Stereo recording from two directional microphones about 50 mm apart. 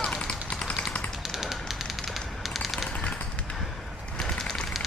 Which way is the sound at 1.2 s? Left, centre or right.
Centre.